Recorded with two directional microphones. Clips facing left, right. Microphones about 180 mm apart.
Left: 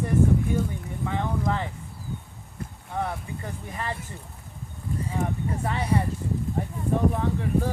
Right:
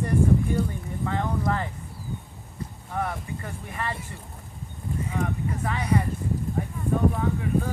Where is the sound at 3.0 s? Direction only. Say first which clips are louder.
Even; 20° left (ahead or behind).